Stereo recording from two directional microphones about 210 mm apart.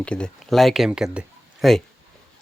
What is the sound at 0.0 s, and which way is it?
Speech, 5° left (ahead or behind).